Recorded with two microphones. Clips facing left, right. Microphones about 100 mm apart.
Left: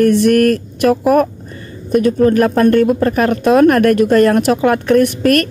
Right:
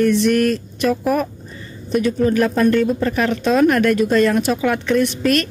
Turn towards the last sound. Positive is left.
turn(degrees=55)  # may be behind; listen again after turning